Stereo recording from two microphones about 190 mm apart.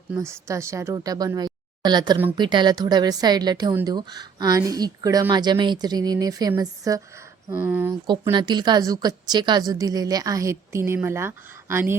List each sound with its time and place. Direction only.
0.1 s a woman's voice: 15° right (ahead or behind)
7.5 s speech: 5° right (ahead or behind)
8.0 s a woman's voice: 25° right (ahead or behind)